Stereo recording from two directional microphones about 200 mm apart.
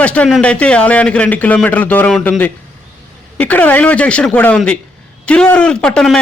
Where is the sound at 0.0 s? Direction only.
5° left (ahead or behind).